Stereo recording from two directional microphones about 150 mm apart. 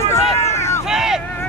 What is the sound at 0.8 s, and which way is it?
Vehicle, 5° right (ahead or behind).